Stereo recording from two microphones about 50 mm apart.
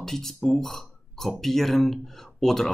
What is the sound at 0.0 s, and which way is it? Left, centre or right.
Speech, centre.